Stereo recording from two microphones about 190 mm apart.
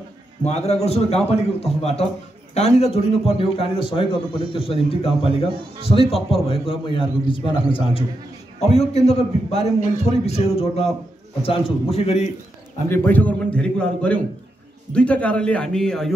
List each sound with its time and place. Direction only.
0.4 s a man's voice: 35° left (ahead or behind)
12.9 s a man's voice: 10° left (ahead or behind)